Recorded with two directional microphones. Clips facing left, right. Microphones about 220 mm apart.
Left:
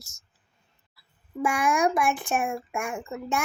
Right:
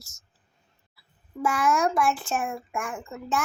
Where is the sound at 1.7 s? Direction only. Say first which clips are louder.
Even; 20° left (ahead or behind).